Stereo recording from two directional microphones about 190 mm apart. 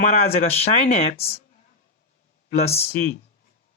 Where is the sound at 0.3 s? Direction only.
35° left (ahead or behind).